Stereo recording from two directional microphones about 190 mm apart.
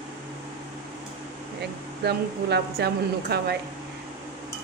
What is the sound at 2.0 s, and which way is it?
Speech, 60° right (ahead or behind).